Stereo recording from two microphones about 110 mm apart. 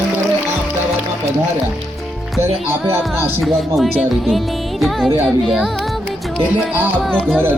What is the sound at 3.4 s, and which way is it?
Music, centre (ahead or behind).